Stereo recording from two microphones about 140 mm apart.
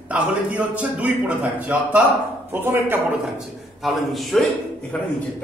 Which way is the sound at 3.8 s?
Centre (ahead or behind).